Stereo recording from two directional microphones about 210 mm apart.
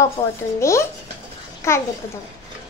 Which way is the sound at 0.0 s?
15° left (ahead or behind).